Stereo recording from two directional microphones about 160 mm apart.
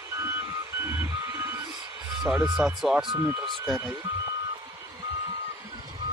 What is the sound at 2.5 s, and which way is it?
Speech, 5° right (ahead or behind).